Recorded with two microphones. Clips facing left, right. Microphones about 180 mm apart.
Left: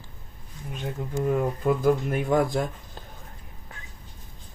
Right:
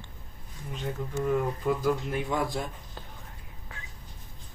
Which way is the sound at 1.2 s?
55° left (ahead or behind).